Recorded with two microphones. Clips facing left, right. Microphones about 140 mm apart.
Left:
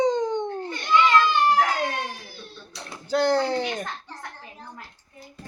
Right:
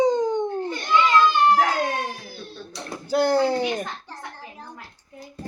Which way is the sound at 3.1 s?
10° right (ahead or behind).